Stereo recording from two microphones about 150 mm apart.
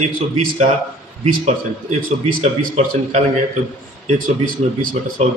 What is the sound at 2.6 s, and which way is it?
Speech, 50° right (ahead or behind).